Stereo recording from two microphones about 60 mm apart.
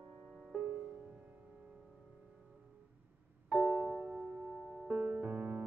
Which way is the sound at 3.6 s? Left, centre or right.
Right.